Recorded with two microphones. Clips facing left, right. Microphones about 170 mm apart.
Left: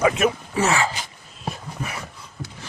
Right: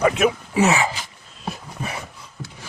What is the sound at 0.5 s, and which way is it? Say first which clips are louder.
Speech: right 4 dB; 15° right (ahead or behind).